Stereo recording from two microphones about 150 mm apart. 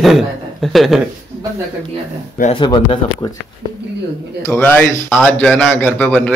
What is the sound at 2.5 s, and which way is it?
Speech, 30° left (ahead or behind).